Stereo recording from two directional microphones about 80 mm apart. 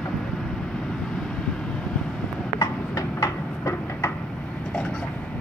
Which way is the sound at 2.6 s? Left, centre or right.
Left.